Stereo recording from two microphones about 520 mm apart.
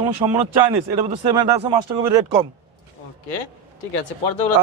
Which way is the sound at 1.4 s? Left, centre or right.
Centre.